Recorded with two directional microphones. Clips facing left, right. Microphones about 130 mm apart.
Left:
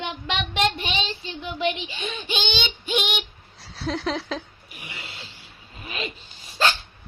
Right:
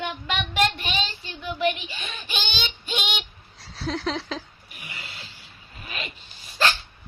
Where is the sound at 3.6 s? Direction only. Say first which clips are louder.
Left 1 dB; centre (ahead or behind).